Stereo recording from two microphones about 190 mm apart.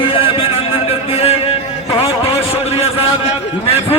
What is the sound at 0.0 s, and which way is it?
Music, 30° left (ahead or behind).